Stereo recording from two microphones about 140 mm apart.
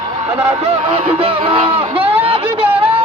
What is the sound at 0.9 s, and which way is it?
A man's voice, 45° right (ahead or behind).